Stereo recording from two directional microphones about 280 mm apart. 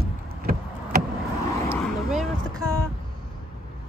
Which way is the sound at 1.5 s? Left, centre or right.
Centre.